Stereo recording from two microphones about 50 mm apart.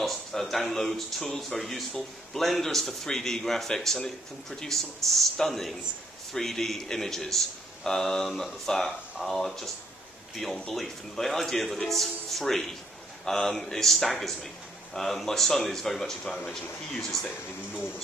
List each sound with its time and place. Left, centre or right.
0.0 s speech: centre